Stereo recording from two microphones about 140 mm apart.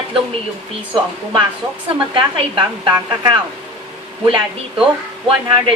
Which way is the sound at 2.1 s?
35° right (ahead or behind).